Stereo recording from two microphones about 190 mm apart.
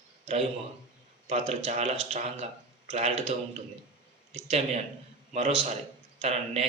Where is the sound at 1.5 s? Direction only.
35° right (ahead or behind).